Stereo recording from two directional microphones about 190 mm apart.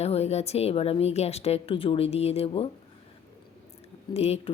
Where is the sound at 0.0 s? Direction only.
35° left (ahead or behind).